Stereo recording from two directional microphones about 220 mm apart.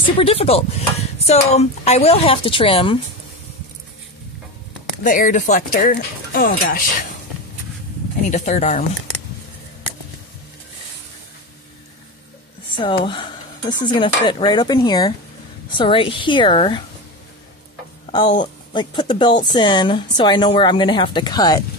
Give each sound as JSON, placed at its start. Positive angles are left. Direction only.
{"t": 0.2, "sound": "a woman's voice", "side_deg": 25}
{"t": 5.0, "sound": "speech", "side_deg": 35}
{"t": 8.3, "sound": "speech", "side_deg": 35}
{"t": 12.7, "sound": "a woman's voice", "side_deg": 20}
{"t": 18.7, "sound": "a woman's voice", "side_deg": 20}